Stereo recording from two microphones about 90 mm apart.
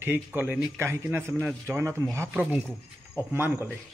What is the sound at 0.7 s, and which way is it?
Speech, 25° right (ahead or behind).